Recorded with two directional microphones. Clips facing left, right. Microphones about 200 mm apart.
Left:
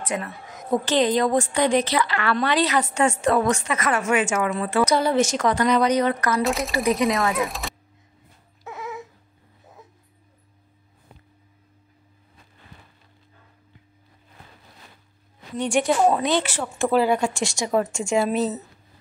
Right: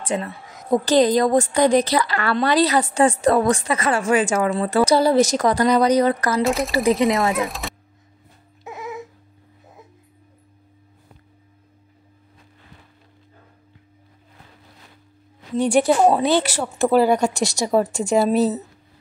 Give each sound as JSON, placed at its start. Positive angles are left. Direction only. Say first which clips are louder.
{"t": 0.0, "sound": "a woman's voice", "louder": "right 3 dB", "side_deg": -30}
{"t": 6.4, "sound": "speech", "louder": "right 3 dB", "side_deg": 0}
{"t": 6.7, "sound": "speech", "louder": "right 4 dB", "side_deg": -30}
{"t": 7.4, "sound": "speech", "louder": "right 1 dB", "side_deg": 0}
{"t": 15.7, "sound": "a woman's voice", "louder": "right 3 dB", "side_deg": -35}